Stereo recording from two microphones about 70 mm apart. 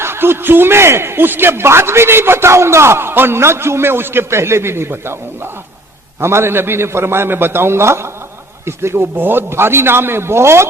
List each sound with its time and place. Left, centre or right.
0.0 s a man's voice: right